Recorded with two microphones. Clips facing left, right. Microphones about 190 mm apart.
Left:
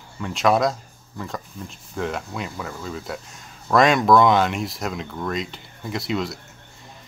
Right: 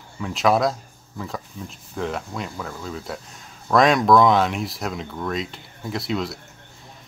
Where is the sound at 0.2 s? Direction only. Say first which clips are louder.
Even; centre (ahead or behind).